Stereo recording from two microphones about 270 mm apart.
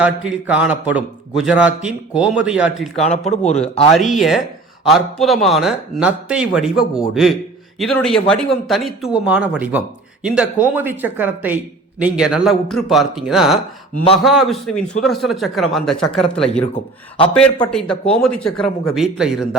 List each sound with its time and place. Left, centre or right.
0.0 s a man's voice: centre
2.9 s a man's voice: left
3.9 s a man's voice: centre